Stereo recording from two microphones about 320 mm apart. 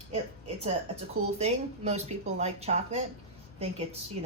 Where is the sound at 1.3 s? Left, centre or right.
Centre.